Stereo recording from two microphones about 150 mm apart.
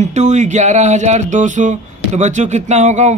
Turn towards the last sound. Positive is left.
turn(degrees=-50)  # may be behind; listen again after turning